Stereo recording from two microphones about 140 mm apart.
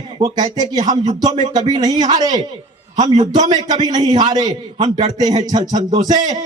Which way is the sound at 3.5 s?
30° right (ahead or behind).